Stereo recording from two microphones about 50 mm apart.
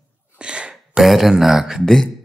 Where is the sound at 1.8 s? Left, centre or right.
Centre.